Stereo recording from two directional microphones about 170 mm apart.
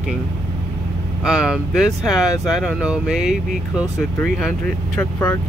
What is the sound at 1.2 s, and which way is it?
Speech, 5° right (ahead or behind).